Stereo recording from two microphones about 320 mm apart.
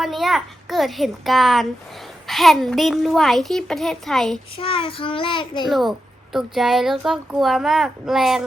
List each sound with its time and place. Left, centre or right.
0.0 s a child's voice: centre
4.5 s a child's voice: centre
5.6 s speech: centre